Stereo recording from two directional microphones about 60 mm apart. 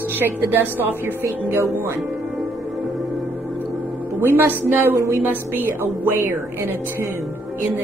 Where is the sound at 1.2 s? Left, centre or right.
Right.